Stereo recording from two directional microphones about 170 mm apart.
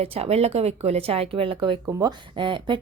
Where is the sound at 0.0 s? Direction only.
35° right (ahead or behind).